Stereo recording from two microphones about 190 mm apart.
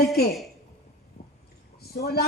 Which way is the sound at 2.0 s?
55° left (ahead or behind).